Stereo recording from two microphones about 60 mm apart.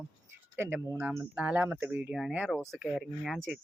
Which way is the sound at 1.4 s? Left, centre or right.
Right.